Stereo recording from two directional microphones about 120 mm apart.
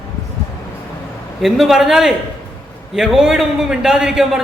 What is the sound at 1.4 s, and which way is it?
Speech, centre (ahead or behind).